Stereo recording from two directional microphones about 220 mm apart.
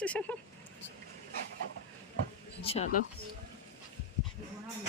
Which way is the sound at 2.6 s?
25° left (ahead or behind).